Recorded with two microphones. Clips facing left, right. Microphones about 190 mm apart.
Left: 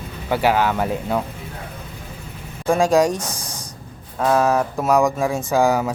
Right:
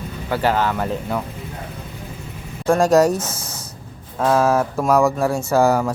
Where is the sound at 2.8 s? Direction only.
10° left (ahead or behind).